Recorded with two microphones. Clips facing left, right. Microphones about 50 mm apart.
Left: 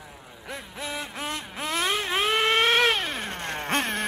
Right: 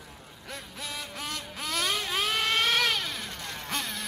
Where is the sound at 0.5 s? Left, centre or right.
Left.